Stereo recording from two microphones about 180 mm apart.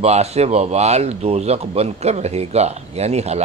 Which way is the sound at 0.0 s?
35° right (ahead or behind).